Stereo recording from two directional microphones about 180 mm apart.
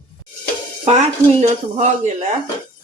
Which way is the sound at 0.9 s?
40° right (ahead or behind).